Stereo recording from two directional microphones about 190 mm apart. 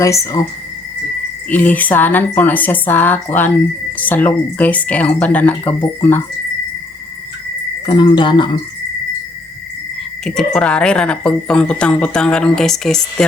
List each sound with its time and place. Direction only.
0.0 s speech: 15° left (ahead or behind)
1.5 s speech: 10° left (ahead or behind)
7.9 s cricket: 25° left (ahead or behind)
10.2 s speech: 5° left (ahead or behind)